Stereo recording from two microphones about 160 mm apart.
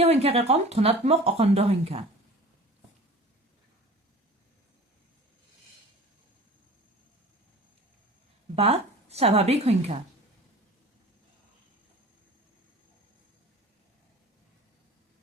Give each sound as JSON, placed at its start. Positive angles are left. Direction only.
{"t": 0.0, "sound": "speech", "side_deg": -40}
{"t": 8.5, "sound": "a woman's voice", "side_deg": -40}